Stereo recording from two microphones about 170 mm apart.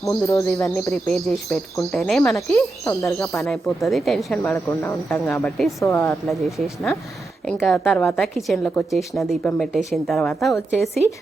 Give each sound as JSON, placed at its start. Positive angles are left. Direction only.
{"t": 0.0, "sound": "speech", "side_deg": 20}
{"t": 1.0, "sound": "a woman's voice", "side_deg": 5}
{"t": 2.3, "sound": "speech", "side_deg": 15}
{"t": 3.4, "sound": "a woman's voice", "side_deg": 0}
{"t": 4.5, "sound": "speech", "side_deg": 15}
{"t": 7.4, "sound": "a woman's voice", "side_deg": 5}
{"t": 9.4, "sound": "a woman's voice", "side_deg": 10}